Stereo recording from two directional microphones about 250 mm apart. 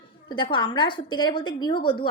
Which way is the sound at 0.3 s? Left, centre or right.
Centre.